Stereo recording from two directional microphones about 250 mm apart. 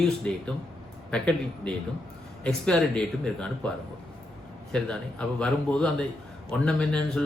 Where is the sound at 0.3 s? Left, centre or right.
Centre.